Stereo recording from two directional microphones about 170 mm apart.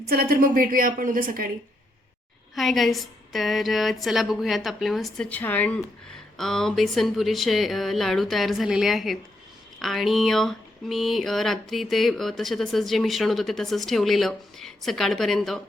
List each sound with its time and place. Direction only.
0.1 s a woman's voice: 60° right (ahead or behind)
2.6 s speech: centre (ahead or behind)